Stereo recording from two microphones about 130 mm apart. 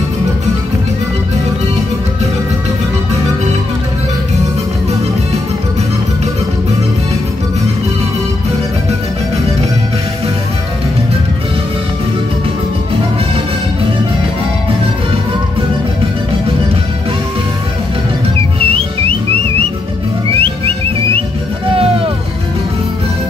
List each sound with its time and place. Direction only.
18.6 s music: 45° right (ahead or behind)